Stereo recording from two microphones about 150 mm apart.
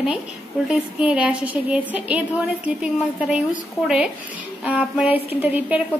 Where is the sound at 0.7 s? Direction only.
5° right (ahead or behind).